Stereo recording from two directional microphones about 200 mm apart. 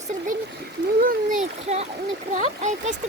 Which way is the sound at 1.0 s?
45° right (ahead or behind).